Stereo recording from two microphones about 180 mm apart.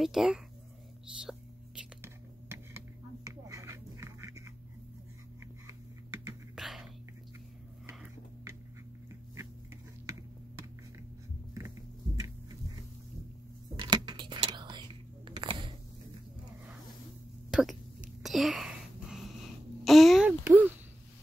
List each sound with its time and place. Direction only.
0.0 s speech: centre (ahead or behind)
3.3 s music: 20° right (ahead or behind)
5.7 s typing: 15° right (ahead or behind)
6.5 s whispering: centre (ahead or behind)
10.1 s finger snapping: 20° right (ahead or behind)
13.7 s whispering: 25° right (ahead or behind)
17.5 s a sound: 5° right (ahead or behind)